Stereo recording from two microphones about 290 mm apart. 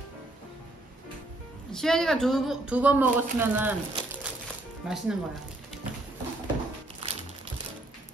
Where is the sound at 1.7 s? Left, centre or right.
Centre.